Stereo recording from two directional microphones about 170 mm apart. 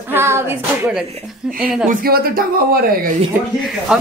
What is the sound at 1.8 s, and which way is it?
Speech, 55° right (ahead or behind).